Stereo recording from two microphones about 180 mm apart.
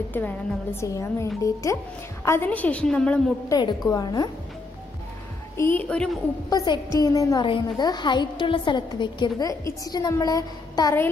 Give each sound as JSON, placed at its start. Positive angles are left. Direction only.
{"t": 0.1, "sound": "a woman's voice", "side_deg": 10}
{"t": 3.4, "sound": "a woman's voice", "side_deg": 20}
{"t": 5.6, "sound": "a woman's voice", "side_deg": 10}
{"t": 6.5, "sound": "a woman's voice", "side_deg": 20}